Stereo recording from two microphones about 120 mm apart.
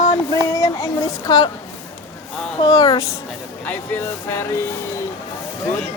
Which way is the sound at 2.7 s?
30° left (ahead or behind).